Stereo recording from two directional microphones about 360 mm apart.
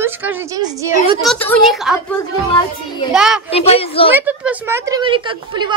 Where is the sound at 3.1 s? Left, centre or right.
Centre.